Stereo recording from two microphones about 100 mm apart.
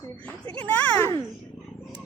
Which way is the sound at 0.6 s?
15° left (ahead or behind).